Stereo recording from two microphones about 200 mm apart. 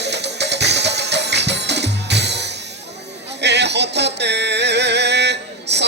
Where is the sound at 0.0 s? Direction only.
60° right (ahead or behind).